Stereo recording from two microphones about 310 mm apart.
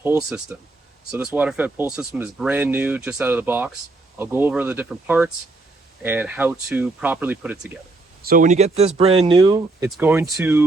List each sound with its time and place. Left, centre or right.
0.0 s speech: centre
8.2 s speech: right; by 10.6 s centre